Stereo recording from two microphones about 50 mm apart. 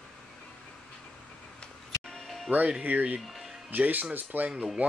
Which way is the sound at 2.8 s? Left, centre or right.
Right.